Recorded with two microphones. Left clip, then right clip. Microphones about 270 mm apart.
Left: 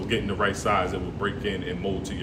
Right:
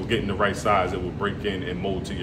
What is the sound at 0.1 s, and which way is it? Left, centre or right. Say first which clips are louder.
Speech: right 2 dB; centre.